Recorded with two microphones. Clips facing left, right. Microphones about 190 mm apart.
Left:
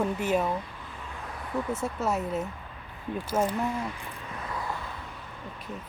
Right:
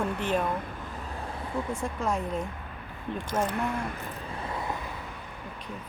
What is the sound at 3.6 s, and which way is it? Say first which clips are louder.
Speech: even; 55° right (ahead or behind).